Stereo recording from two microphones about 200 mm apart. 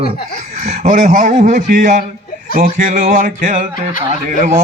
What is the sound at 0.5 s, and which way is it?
Speech, 40° right (ahead or behind).